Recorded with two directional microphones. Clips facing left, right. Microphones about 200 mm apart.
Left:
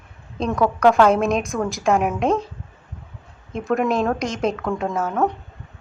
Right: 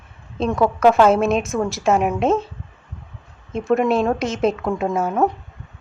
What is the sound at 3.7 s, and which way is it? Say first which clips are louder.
A woman's voice: right 3 dB; 5° right (ahead or behind).